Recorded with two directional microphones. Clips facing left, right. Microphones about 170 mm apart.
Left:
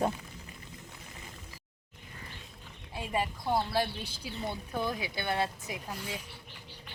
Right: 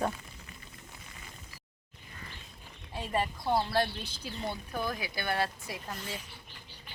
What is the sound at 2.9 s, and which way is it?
Speech, 10° left (ahead or behind).